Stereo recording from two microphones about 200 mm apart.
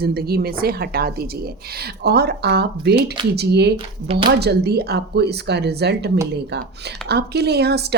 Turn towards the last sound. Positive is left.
turn(degrees=-55)  # may be behind; listen again after turning